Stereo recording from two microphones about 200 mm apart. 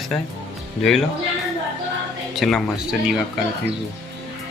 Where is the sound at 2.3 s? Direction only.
Centre (ahead or behind).